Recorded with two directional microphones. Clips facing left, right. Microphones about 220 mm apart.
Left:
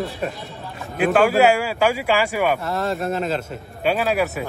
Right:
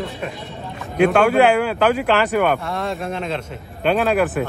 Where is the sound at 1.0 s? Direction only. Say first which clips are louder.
Right 2 dB; 5° left (ahead or behind).